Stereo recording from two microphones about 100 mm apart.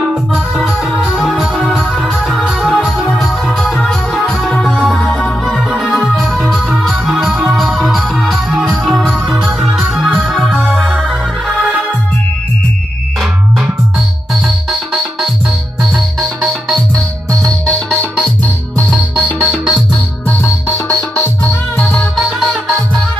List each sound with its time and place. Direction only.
0.1 s music: centre (ahead or behind)
2.2 s music: 10° right (ahead or behind)
15.8 s music: centre (ahead or behind)
19.4 s music: 5° right (ahead or behind)
20.2 s music: 25° left (ahead or behind)
21.7 s music: 5° left (ahead or behind)